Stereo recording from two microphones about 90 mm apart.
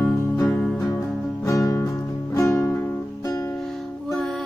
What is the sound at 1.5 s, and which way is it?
Music, 35° left (ahead or behind).